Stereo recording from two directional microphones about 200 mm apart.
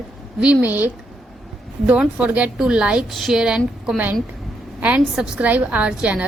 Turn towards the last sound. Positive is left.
turn(degrees=-5)  # may be behind; listen again after turning